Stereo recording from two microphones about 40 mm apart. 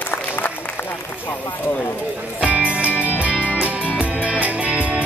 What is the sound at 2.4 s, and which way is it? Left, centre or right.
Music, right.